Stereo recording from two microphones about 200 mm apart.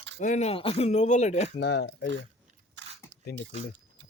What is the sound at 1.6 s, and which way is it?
Speech, 60° left (ahead or behind).